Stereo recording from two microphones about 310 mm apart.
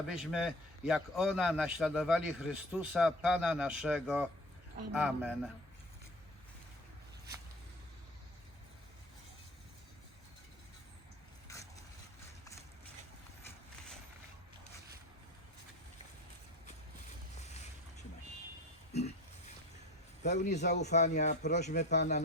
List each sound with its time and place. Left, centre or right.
0.1 s a man's voice: centre
11.5 s boat: centre
20.3 s speech: left